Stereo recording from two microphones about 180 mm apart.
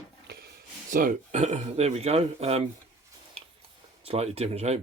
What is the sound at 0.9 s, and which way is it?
Speech, 45° right (ahead or behind).